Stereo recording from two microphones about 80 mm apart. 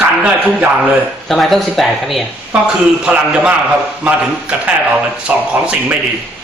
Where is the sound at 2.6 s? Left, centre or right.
Centre.